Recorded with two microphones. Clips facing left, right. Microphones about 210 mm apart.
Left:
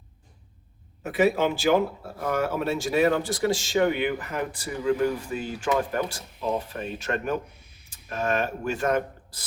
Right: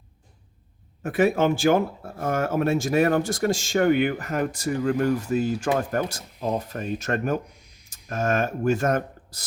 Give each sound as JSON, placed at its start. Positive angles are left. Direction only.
{"t": 1.0, "sound": "speech", "side_deg": -50}
{"t": 7.5, "sound": "a sound", "side_deg": -15}
{"t": 8.1, "sound": "speech", "side_deg": -45}